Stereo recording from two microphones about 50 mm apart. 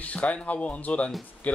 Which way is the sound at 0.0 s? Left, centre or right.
Left.